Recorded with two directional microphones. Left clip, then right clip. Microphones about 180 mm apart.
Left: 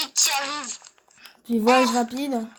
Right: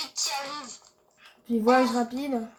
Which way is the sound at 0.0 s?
55° left (ahead or behind).